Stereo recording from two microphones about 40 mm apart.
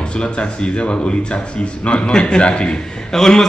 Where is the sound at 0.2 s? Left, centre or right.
Left.